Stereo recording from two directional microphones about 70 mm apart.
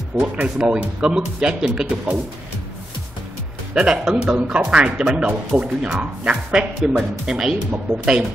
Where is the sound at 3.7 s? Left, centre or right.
Centre.